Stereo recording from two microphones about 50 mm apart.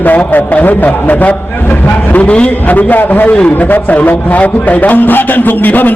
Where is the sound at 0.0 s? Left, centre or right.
Left.